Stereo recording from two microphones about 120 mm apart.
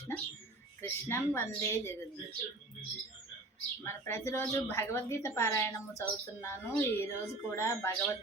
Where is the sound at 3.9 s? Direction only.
20° left (ahead or behind).